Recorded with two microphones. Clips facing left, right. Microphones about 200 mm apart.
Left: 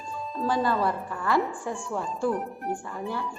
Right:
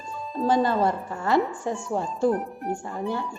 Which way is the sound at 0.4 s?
25° right (ahead or behind).